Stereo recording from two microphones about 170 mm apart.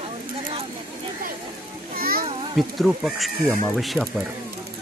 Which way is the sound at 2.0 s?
60° right (ahead or behind).